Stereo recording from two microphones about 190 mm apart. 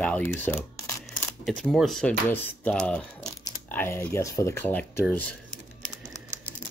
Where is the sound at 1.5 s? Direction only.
5° left (ahead or behind).